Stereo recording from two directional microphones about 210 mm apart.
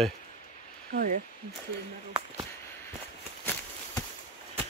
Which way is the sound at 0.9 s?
45° right (ahead or behind).